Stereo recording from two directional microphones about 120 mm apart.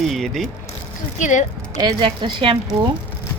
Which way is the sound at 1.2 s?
90° left.